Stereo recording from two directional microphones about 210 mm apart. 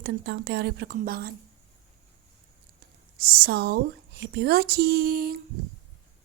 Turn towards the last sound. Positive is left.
turn(degrees=-45)  # may be behind; listen again after turning